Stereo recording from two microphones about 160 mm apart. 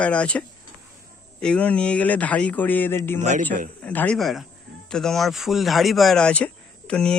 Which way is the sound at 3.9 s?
10° left (ahead or behind).